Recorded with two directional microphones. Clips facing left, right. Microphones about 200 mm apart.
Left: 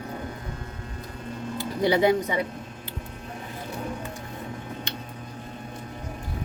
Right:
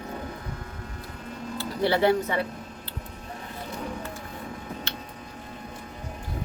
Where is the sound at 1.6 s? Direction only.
15° left (ahead or behind).